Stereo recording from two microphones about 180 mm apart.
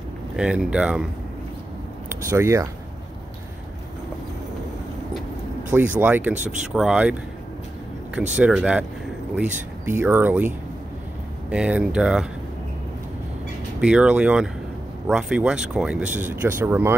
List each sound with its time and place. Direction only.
0.4 s speech: 5° right (ahead or behind)
2.0 s speech: 15° right (ahead or behind)
5.7 s speech: 10° right (ahead or behind)
6.3 s speech: 45° right (ahead or behind)
6.7 s speech: 5° right (ahead or behind)
11.5 s speech: 5° right (ahead or behind)
13.7 s speech: 5° right (ahead or behind)